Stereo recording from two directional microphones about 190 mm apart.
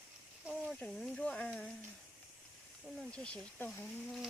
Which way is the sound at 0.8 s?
5° left (ahead or behind).